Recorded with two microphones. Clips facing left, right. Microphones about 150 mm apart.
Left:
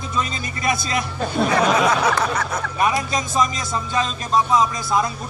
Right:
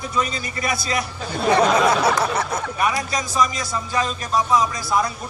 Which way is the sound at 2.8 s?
25° left (ahead or behind).